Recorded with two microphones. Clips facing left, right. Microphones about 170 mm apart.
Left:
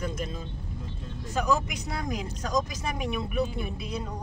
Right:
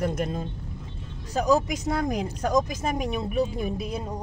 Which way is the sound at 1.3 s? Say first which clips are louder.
Right 5 dB; 40° right (ahead or behind).